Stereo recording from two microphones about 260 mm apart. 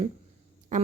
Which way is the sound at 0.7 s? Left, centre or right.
Right.